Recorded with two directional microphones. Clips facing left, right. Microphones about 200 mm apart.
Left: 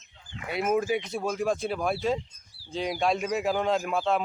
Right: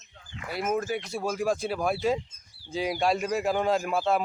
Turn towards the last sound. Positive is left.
turn(degrees=-5)  # may be behind; listen again after turning